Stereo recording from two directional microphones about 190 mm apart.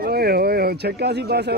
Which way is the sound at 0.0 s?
55° right (ahead or behind).